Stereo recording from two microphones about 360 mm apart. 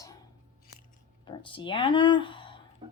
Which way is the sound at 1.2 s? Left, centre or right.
Centre.